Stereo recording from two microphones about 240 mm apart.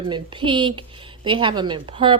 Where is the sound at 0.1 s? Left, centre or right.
Centre.